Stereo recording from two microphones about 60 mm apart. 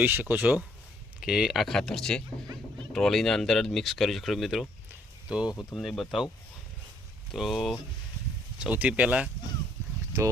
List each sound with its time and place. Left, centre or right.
0.0 s speech: right
1.2 s speech: centre
1.6 s speech: centre
5.3 s speech: centre
5.7 s speech: centre
7.3 s speech: centre
8.7 s speech: right